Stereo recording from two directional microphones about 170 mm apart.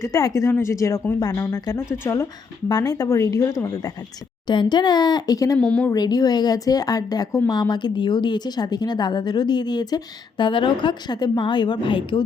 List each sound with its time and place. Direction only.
0.0 s a woman's voice: 20° left (ahead or behind)
5.5 s speech: 5° left (ahead or behind)
5.9 s a woman's voice: 20° left (ahead or behind)